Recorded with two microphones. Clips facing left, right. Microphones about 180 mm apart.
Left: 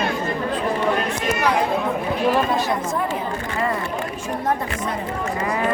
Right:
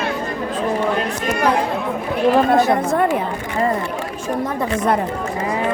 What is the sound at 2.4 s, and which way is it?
Speech, 60° right (ahead or behind).